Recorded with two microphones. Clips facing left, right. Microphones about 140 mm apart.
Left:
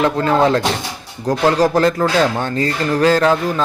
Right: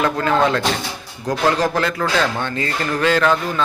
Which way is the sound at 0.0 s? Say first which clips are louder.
Left 3 dB; 25° left (ahead or behind).